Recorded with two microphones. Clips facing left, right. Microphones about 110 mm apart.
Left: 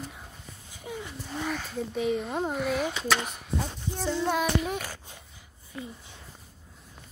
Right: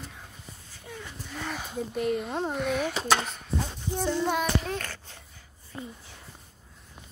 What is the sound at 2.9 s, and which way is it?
Speech, 35° right (ahead or behind).